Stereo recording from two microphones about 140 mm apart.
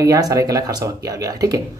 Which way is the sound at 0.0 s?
25° right (ahead or behind).